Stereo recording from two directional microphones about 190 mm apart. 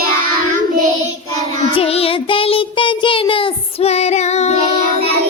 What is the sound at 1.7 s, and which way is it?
Child singing, 30° left (ahead or behind).